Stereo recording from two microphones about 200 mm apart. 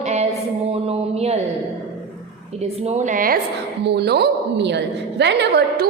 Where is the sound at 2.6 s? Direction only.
30° right (ahead or behind).